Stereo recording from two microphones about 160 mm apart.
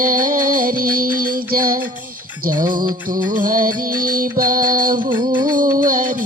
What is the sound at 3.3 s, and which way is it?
Music, 60° right (ahead or behind).